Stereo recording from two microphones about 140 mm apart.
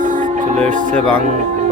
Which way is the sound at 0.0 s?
65° right (ahead or behind).